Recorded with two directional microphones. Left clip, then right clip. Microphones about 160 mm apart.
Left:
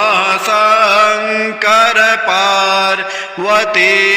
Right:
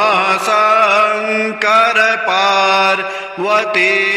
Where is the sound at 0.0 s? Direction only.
Centre (ahead or behind).